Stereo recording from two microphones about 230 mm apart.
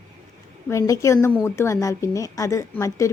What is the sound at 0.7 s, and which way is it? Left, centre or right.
Speech, centre.